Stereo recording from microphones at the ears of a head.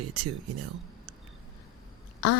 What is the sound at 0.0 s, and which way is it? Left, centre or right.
Speech, right.